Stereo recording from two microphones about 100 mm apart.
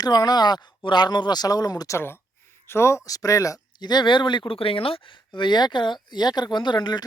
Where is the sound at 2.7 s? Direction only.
25° left (ahead or behind); by 7.0 s 45° left (ahead or behind).